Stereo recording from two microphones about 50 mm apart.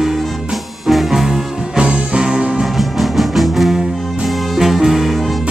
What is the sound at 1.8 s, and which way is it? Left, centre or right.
Music, centre.